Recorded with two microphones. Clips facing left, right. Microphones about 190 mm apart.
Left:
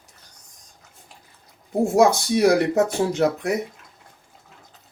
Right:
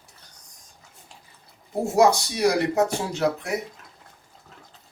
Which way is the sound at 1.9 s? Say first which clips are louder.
Left 1 dB; 55° left (ahead or behind).